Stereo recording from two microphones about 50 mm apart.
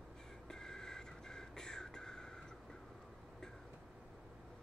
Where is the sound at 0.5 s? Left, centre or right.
Centre.